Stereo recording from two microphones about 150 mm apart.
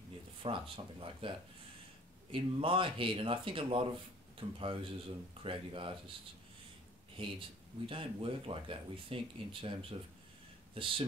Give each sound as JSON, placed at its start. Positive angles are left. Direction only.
{"t": 0.4, "sound": "speech", "side_deg": -35}
{"t": 2.3, "sound": "speech", "side_deg": -35}
{"t": 7.2, "sound": "speech", "side_deg": -35}